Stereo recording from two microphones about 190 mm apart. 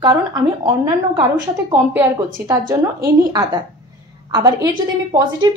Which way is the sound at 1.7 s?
10° right (ahead or behind).